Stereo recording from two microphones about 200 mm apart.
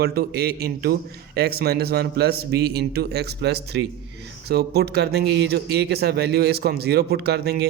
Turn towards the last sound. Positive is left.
turn(degrees=-55)  # may be behind; listen again after turning